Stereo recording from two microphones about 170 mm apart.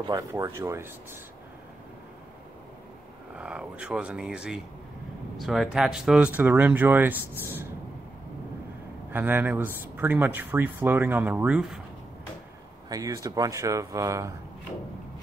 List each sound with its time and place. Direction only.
0.0 s speech: 20° right (ahead or behind)
3.3 s speech: 5° right (ahead or behind)
9.1 s speech: 10° right (ahead or behind)
12.9 s speech: 20° right (ahead or behind)